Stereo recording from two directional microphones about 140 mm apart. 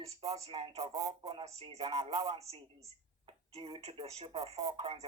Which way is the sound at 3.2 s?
35° right (ahead or behind).